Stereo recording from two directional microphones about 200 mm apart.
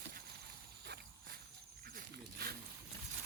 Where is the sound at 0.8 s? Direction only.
50° right (ahead or behind).